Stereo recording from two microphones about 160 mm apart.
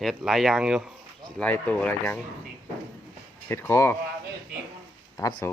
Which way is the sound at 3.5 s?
15° left (ahead or behind).